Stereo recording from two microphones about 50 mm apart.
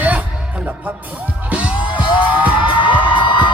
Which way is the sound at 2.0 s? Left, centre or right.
Right.